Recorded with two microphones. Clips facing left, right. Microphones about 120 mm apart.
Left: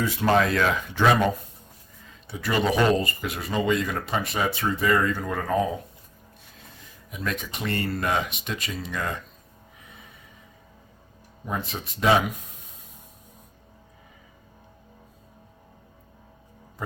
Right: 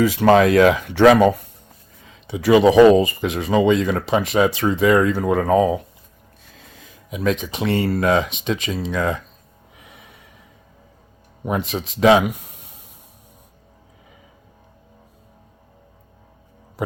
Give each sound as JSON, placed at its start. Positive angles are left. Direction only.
{"t": 0.0, "sound": "speech", "side_deg": -90}
{"t": 7.1, "sound": "speech", "side_deg": -90}
{"t": 11.4, "sound": "speech", "side_deg": -80}